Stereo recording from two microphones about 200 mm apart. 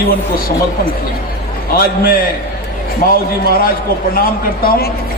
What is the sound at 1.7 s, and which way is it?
Speech, 45° left (ahead or behind).